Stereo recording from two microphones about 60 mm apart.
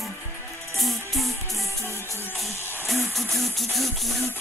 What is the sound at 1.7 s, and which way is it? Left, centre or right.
Music, left.